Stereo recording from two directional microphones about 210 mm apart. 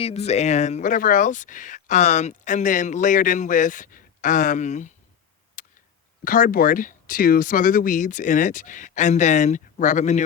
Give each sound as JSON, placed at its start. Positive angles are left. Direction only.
{"t": 0.0, "sound": "speech", "side_deg": 30}
{"t": 5.6, "sound": "a sound", "side_deg": 40}
{"t": 6.2, "sound": "speech", "side_deg": 40}